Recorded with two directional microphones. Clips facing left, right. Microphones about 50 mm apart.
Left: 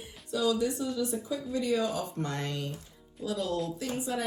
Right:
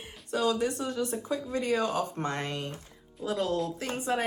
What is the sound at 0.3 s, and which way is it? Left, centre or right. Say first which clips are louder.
A woman's voice: right 1 dB; right.